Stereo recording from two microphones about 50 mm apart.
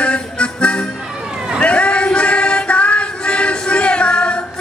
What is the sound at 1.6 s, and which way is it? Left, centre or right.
Music, left.